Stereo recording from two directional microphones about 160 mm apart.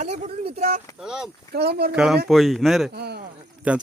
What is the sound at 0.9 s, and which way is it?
Speech, 5° right (ahead or behind).